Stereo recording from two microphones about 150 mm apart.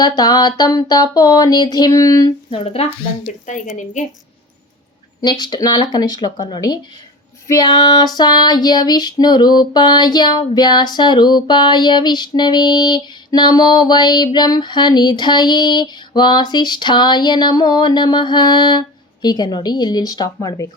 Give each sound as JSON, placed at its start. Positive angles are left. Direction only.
{"t": 0.0, "sound": "female singing", "side_deg": 25}
{"t": 2.5, "sound": "a woman's voice", "side_deg": 40}
{"t": 5.2, "sound": "female singing", "side_deg": 30}